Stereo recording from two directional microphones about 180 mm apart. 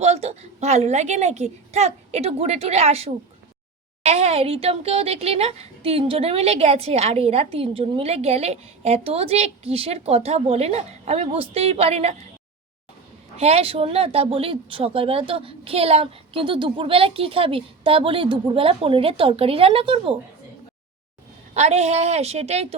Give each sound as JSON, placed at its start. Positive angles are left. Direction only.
{"t": 0.0, "sound": "a woman's voice", "side_deg": -35}
{"t": 13.3, "sound": "a woman's voice", "side_deg": -35}
{"t": 21.5, "sound": "a woman's voice", "side_deg": -40}